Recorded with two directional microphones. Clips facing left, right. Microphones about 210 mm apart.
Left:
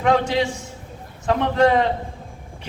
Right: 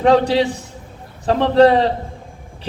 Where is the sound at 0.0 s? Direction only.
35° right (ahead or behind).